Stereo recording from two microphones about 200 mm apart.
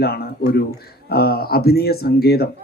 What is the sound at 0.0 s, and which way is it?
Speech, 50° left (ahead or behind).